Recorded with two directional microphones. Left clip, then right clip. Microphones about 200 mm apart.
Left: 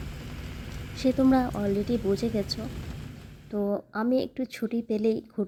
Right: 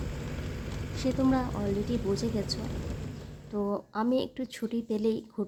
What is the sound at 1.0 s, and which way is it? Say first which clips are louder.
A woman's voice: left 5 dB; 15° left (ahead or behind).